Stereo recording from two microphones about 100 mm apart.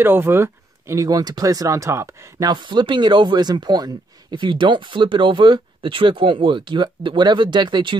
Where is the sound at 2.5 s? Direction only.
50° right (ahead or behind).